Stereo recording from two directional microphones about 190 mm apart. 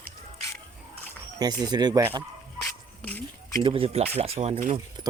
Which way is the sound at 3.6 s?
30° right (ahead or behind).